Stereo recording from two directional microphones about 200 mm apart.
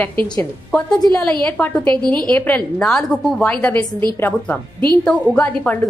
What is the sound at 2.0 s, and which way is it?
Speech, 20° right (ahead or behind).